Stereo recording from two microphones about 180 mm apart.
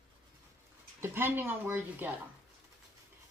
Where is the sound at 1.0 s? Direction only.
10° right (ahead or behind).